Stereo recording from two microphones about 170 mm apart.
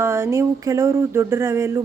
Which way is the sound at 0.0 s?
15° right (ahead or behind).